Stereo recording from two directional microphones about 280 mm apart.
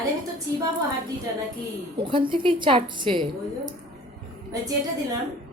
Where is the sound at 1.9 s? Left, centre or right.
Centre.